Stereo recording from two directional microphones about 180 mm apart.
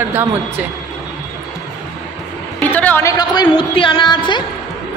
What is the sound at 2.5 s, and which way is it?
Music, 10° left (ahead or behind).